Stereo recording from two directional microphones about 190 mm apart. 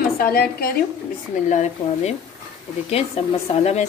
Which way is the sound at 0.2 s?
50° left (ahead or behind).